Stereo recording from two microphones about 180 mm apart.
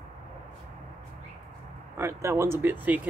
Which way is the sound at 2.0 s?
15° right (ahead or behind).